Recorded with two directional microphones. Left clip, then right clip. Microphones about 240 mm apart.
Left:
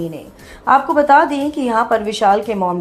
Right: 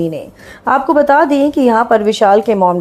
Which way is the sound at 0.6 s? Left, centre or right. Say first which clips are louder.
Right 2 dB; right.